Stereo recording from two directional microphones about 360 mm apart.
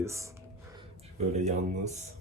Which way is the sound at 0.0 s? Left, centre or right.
Centre.